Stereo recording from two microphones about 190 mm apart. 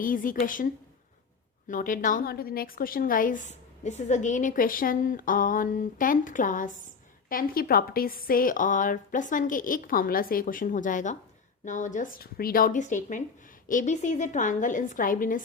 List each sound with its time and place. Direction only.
0.0 s a woman's voice: 45° left (ahead or behind)